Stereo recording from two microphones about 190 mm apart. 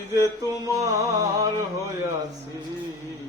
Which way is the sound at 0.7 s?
20° right (ahead or behind).